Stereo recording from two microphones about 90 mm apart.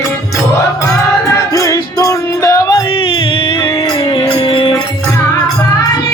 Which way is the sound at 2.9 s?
80° left.